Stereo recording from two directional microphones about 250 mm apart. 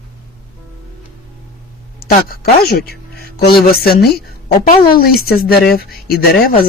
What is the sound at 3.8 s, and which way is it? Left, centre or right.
Speech, left.